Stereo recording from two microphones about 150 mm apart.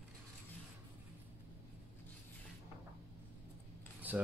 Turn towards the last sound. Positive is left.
turn(degrees=-10)  # may be behind; listen again after turning